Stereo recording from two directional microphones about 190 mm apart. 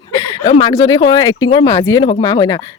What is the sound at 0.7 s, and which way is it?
Speech, 20° left (ahead or behind).